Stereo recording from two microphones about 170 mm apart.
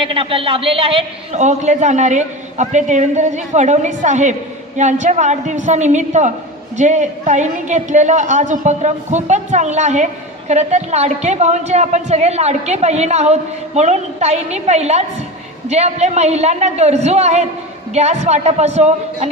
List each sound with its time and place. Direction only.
0.0 s a man's voice: 30° right (ahead or behind)